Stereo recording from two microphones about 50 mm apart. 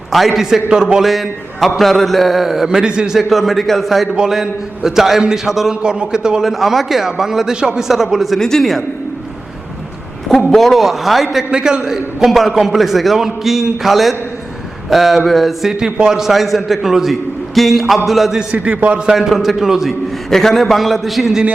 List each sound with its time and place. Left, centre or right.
0.1 s a man's voice: centre
2.6 s a man's voice: centre
3.2 s a man's voice: centre
5.8 s a man's voice: centre
8.4 s a man's voice: centre
10.3 s a man's voice: centre
11.5 s a man's voice: centre
15.8 s a man's voice: centre
18.5 s a man's voice: right
19.1 s a man's voice: centre
20.3 s a man's voice: centre